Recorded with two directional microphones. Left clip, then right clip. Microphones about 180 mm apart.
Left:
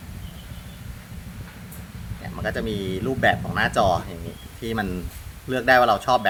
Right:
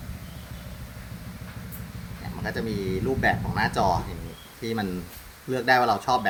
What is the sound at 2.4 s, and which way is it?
Speech, 35° left (ahead or behind).